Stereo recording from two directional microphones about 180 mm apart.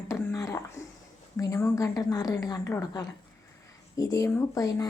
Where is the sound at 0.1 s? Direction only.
15° left (ahead or behind).